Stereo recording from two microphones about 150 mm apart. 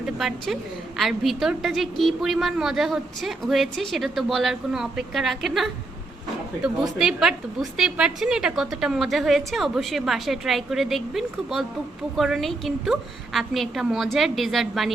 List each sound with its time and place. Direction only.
0.0 s a woman's voice: centre (ahead or behind)